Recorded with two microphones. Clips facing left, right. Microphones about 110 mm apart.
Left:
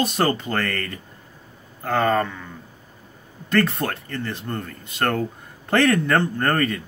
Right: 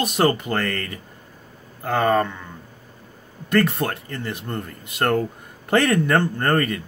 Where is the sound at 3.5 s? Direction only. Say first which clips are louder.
Right 1 dB; 15° right (ahead or behind).